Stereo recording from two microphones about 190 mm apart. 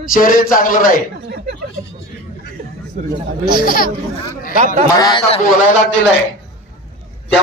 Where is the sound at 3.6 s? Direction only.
50° left (ahead or behind).